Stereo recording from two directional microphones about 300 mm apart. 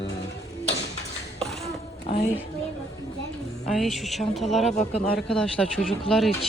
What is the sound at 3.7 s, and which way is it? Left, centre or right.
Speech, centre.